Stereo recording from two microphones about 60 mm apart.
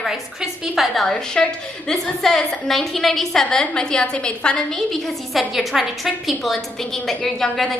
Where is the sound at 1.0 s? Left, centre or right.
Centre.